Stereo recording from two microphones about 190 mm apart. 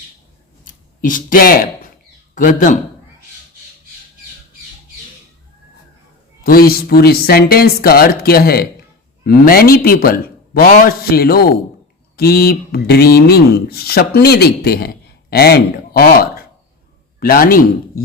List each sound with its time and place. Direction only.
0.6 s a sound: 45° left (ahead or behind)
2.3 s a man's voice: 45° left (ahead or behind)
6.4 s a man's voice: 50° left (ahead or behind)